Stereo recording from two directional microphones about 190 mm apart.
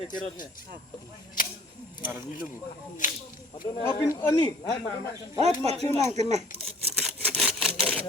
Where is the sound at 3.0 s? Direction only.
45° left (ahead or behind).